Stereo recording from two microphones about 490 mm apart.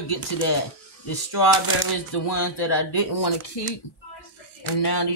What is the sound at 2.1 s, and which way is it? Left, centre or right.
Speech, left.